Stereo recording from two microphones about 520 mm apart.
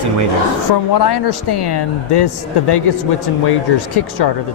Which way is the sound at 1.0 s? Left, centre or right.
Left.